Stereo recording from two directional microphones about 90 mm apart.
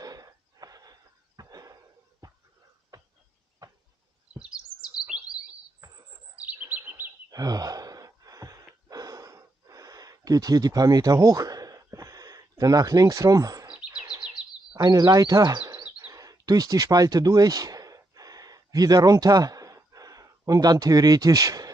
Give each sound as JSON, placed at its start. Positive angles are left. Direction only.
{"t": 0.0, "sound": "a sound", "side_deg": -45}
{"t": 4.4, "sound": "chirp", "side_deg": -10}
{"t": 6.3, "sound": "chirp", "side_deg": -15}
{"t": 7.2, "sound": "gasp", "side_deg": -45}
{"t": 13.7, "sound": "chirp", "side_deg": -15}
{"t": 14.8, "sound": "speech", "side_deg": -45}
{"t": 16.1, "sound": "a sound", "side_deg": -40}